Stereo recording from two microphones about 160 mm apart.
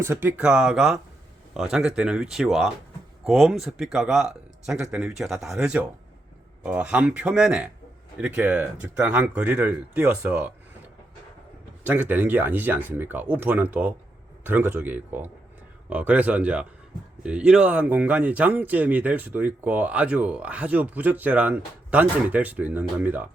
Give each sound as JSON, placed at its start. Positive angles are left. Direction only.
{"t": 0.0, "sound": "speech", "side_deg": -15}
{"t": 11.8, "sound": "speech", "side_deg": -10}